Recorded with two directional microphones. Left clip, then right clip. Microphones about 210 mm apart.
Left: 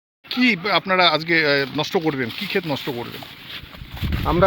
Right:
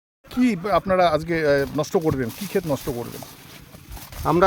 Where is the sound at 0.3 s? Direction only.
50° right (ahead or behind).